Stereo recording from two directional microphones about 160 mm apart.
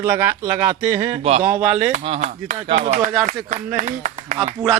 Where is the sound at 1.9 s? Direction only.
45° right (ahead or behind).